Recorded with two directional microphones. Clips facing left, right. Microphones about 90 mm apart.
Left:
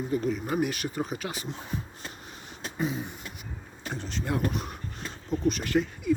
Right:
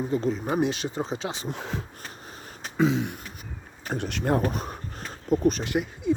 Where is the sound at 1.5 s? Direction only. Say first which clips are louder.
Right 3 dB; 90° right.